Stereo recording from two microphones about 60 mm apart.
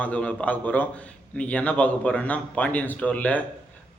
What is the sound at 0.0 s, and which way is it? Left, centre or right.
A man's voice, left.